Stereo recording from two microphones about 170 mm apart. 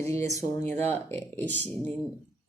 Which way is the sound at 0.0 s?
15° left (ahead or behind).